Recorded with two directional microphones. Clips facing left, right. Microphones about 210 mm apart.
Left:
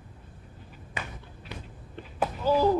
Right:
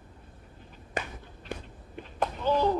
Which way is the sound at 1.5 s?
50° right (ahead or behind).